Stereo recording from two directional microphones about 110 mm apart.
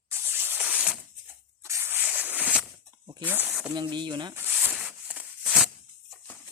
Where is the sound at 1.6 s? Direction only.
25° right (ahead or behind).